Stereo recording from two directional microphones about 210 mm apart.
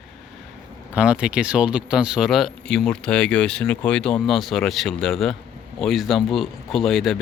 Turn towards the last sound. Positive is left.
turn(degrees=0)  # may be behind; listen again after turning